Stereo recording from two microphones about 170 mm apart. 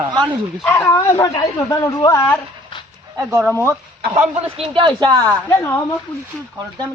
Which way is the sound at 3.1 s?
20° right (ahead or behind).